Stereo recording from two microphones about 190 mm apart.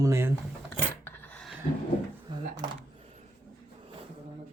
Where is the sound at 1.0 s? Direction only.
5° left (ahead or behind).